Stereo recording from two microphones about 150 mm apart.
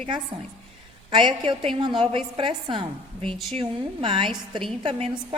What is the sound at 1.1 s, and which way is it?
A woman's voice, 35° right (ahead or behind).